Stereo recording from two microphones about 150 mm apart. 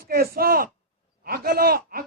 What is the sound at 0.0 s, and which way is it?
A man's voice, 85° right.